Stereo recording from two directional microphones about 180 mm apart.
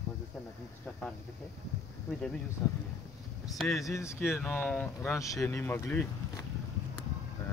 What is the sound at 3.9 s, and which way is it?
Speech, 15° left (ahead or behind).